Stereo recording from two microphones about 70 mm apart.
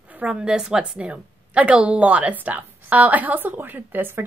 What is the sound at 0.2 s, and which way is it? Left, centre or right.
A woman's voice, centre.